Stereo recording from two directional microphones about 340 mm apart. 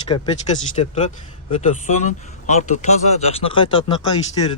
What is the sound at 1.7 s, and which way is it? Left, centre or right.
A man's voice, left.